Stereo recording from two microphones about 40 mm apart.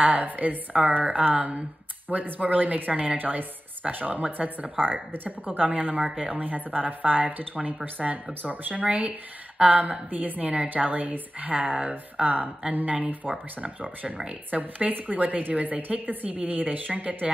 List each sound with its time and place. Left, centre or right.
0.0 s a woman's voice: right
13.3 s speech: right
14.5 s a woman's voice: right
16.5 s a woman's voice: right